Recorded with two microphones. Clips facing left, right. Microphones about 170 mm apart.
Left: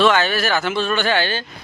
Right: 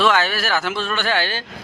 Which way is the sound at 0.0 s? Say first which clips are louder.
Left 2 dB; 5° right (ahead or behind).